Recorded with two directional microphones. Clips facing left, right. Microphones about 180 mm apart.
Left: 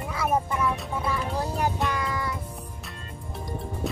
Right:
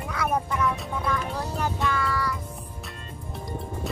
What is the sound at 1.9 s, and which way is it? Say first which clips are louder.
Music: right 2 dB; 20° left (ahead or behind).